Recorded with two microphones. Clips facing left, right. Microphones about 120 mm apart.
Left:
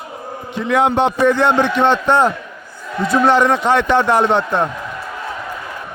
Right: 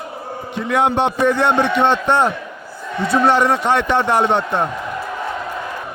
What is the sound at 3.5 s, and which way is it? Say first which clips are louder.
Speech: left 2 dB; 90° left.